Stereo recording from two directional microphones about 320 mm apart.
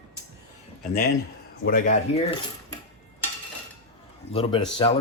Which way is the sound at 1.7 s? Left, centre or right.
Left.